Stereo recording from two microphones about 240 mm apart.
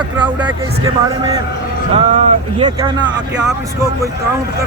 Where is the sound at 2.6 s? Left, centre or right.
Centre.